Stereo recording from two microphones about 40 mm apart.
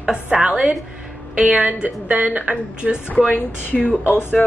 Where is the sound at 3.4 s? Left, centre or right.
Left.